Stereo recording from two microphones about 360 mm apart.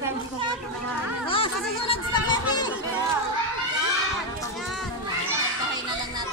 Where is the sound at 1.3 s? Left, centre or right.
Centre.